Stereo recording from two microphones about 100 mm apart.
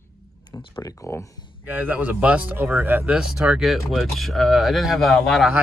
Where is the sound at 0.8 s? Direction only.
25° left (ahead or behind).